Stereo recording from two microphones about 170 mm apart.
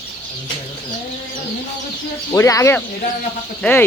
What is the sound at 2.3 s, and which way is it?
Speech, 20° left (ahead or behind).